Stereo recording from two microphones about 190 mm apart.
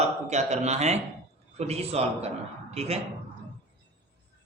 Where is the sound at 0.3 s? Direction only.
35° right (ahead or behind).